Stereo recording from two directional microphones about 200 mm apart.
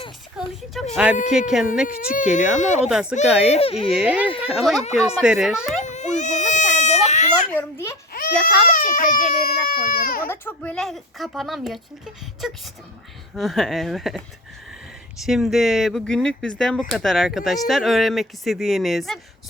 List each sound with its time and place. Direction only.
0.3 s a child's voice: centre (ahead or behind)
2.0 s speech: 40° left (ahead or behind)
2.8 s a child's voice: 5° right (ahead or behind)
3.5 s speech: 30° left (ahead or behind)
3.9 s a child's voice: 5° right (ahead or behind)
5.8 s baby cry: 35° left (ahead or behind)
7.5 s a child's voice: 10° left (ahead or behind)
8.7 s speech: 40° left (ahead or behind)
10.2 s a child's voice: 10° left (ahead or behind)